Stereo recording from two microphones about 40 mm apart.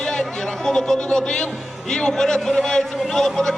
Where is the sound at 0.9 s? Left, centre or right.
Left.